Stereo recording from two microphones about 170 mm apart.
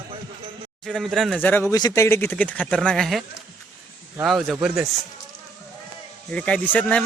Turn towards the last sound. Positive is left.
turn(degrees=10)  # may be behind; listen again after turning